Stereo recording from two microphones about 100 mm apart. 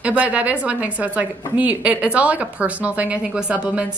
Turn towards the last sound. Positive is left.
turn(degrees=-10)  # may be behind; listen again after turning